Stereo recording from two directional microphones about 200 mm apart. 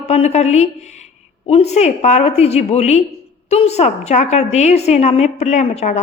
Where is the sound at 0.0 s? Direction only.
35° left (ahead or behind).